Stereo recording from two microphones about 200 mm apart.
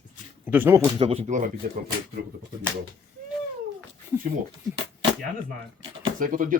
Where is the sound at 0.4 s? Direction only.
10° right (ahead or behind).